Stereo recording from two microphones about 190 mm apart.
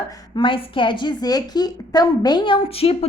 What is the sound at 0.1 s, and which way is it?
A woman's voice, 25° left (ahead or behind).